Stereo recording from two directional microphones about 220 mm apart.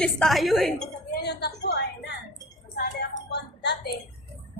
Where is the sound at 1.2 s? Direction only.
50° left (ahead or behind).